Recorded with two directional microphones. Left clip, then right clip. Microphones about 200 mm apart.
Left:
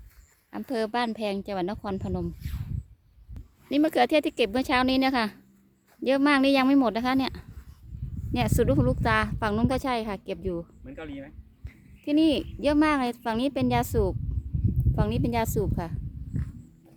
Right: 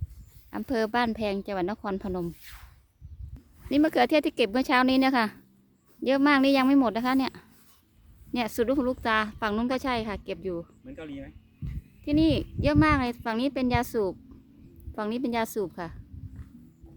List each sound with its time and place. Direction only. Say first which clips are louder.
0.5 s a woman's voice: right 1 dB; 10° right (ahead or behind)
3.7 s a woman's voice: even; centre (ahead or behind)
10.8 s speech: left 1 dB; 35° left (ahead or behind)
12.0 s a woman's voice: left 1 dB; 10° left (ahead or behind)